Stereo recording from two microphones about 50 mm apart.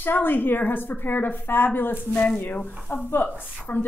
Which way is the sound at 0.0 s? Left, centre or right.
Left.